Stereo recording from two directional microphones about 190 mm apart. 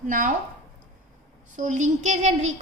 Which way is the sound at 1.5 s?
40° right (ahead or behind).